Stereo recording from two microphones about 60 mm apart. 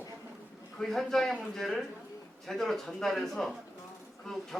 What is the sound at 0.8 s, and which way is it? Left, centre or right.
Speech, centre.